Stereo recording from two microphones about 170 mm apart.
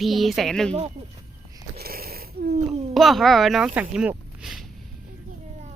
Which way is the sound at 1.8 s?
60° right (ahead or behind).